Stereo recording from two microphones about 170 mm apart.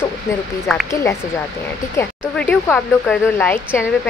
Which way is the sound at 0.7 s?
Centre (ahead or behind).